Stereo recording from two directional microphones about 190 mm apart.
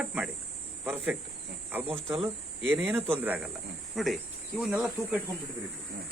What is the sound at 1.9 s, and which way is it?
Speech, centre (ahead or behind).